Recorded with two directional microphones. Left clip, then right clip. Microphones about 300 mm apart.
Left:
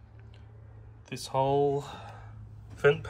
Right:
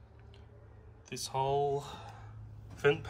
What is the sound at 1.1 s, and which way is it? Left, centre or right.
A man's voice, centre.